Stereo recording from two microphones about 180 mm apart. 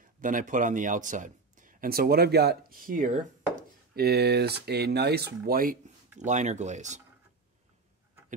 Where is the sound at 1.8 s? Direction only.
55° right (ahead or behind); by 7.0 s 40° right (ahead or behind).